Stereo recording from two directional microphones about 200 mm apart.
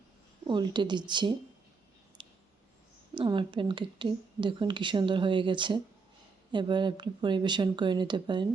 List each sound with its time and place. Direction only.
0.4 s speech: 20° right (ahead or behind)
2.2 s a sound: 25° right (ahead or behind)
3.2 s speech: 25° right (ahead or behind)